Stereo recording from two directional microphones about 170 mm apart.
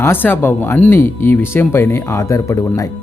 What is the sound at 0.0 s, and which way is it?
Speech, 10° left (ahead or behind).